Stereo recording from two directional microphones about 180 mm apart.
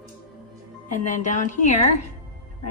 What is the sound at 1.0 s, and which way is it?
Speech, 45° left (ahead or behind).